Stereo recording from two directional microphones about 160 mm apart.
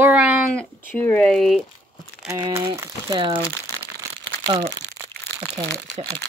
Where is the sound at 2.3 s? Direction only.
20° right (ahead or behind).